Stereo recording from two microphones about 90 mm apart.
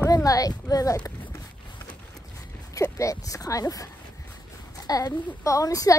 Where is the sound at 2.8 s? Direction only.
35° left (ahead or behind).